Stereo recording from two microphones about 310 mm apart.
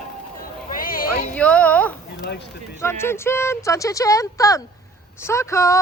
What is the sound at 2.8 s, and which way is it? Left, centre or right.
Speech, centre.